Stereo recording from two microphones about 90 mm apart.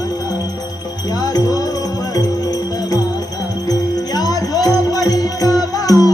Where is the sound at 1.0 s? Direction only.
45° left (ahead or behind).